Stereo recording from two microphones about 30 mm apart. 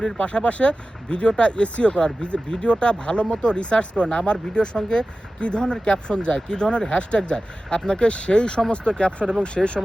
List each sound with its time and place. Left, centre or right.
0.2 s speech: left
5.4 s speech: left
9.6 s speech: centre